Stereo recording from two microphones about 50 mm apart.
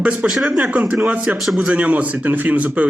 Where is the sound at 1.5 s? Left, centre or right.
Centre.